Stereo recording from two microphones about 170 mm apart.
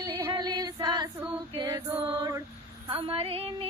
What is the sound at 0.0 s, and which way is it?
Female singing, 30° right (ahead or behind).